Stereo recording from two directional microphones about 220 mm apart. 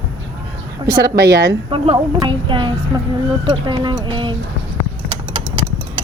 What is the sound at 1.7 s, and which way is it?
A woman's voice, 25° right (ahead or behind).